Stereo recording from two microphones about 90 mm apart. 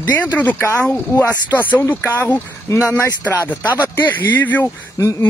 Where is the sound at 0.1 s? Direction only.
20° left (ahead or behind).